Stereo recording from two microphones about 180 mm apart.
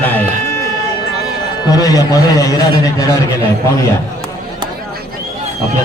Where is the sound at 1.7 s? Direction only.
20° left (ahead or behind).